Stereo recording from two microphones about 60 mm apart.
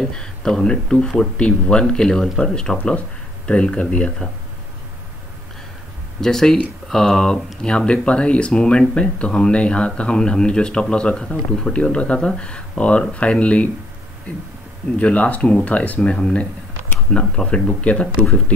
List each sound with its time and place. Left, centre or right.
0.0 s speech: centre
6.2 s speech: centre
15.0 s speech: left